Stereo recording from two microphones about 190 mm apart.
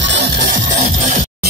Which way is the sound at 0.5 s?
40° right (ahead or behind).